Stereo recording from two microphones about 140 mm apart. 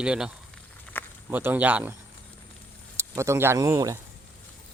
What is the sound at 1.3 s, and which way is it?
Speech, 15° right (ahead or behind).